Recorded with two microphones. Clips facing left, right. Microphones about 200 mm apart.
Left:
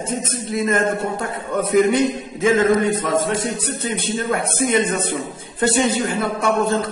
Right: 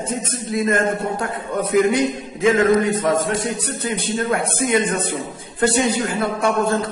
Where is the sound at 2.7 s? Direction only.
25° left (ahead or behind).